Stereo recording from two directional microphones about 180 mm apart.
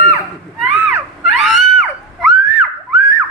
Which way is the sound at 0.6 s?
Centre (ahead or behind).